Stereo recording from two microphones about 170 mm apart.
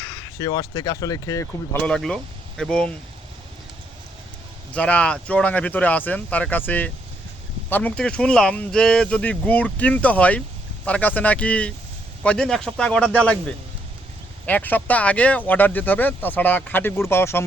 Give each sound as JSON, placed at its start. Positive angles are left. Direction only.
{"t": 0.3, "sound": "speech", "side_deg": 20}
{"t": 1.8, "sound": "speech", "side_deg": 5}
{"t": 4.7, "sound": "speech", "side_deg": 5}
{"t": 14.4, "sound": "speech", "side_deg": 10}